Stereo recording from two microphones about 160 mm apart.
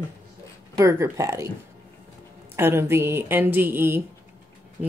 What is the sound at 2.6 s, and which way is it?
A woman's voice, 15° right (ahead or behind).